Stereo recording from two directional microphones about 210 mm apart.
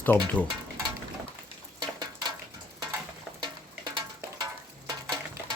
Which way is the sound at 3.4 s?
20° right (ahead or behind).